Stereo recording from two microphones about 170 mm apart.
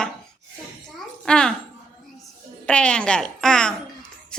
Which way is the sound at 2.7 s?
5° left (ahead or behind).